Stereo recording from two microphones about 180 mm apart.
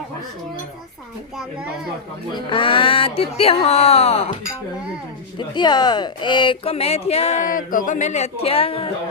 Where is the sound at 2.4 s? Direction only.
30° left (ahead or behind).